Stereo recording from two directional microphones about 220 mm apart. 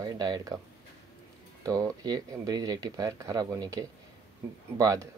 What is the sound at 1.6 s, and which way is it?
Speech, 15° right (ahead or behind).